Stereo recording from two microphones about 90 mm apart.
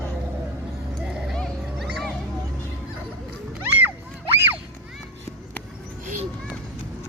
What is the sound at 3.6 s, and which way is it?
Music, 20° right (ahead or behind).